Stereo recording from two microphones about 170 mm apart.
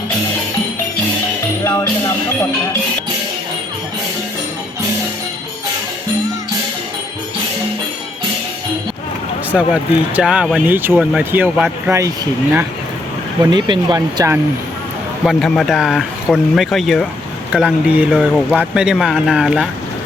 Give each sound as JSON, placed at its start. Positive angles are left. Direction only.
{"t": 1.6, "sound": "music", "side_deg": 15}
{"t": 9.5, "sound": "speech", "side_deg": -5}
{"t": 13.4, "sound": "speech", "side_deg": -25}
{"t": 15.2, "sound": "speech", "side_deg": 0}